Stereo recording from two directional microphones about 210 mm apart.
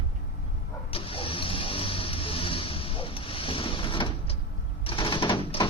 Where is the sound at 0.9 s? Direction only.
25° left (ahead or behind).